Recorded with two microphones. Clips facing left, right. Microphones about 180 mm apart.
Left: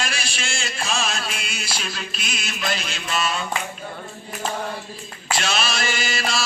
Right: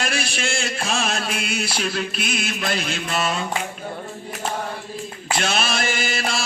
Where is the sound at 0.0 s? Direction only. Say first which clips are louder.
Right 4 dB; 55° right (ahead or behind).